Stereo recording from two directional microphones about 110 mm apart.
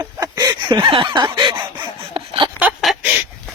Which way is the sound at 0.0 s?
40° right (ahead or behind).